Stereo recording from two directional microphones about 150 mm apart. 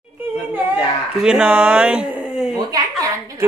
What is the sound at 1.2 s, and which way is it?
Speech, 10° right (ahead or behind).